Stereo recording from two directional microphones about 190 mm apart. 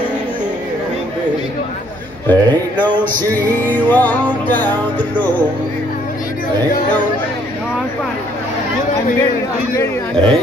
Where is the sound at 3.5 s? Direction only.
10° left (ahead or behind).